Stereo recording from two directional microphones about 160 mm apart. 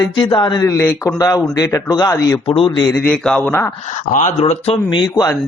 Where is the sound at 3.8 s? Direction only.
50° left (ahead or behind); by 5.3 s 25° left (ahead or behind).